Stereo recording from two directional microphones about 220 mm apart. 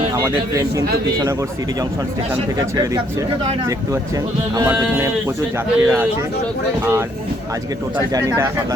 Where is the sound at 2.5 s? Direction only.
15° right (ahead or behind).